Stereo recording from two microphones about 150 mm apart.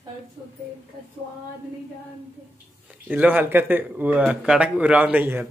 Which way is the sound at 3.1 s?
10° right (ahead or behind).